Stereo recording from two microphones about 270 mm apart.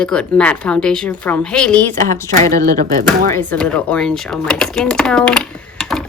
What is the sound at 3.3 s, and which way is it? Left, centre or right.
Speech, centre.